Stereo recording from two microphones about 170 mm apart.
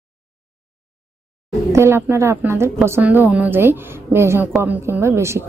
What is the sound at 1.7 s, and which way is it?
A woman's voice, 15° right (ahead or behind).